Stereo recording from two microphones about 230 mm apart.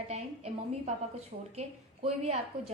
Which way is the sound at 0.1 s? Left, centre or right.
Right.